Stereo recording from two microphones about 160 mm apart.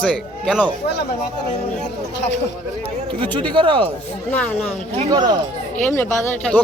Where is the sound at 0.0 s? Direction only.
5° left (ahead or behind).